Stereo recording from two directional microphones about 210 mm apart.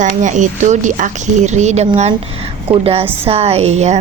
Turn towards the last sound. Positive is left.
turn(degrees=-30)  # may be behind; listen again after turning